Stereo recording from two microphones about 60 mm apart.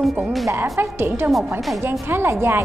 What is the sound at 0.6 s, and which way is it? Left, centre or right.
A woman's voice, right.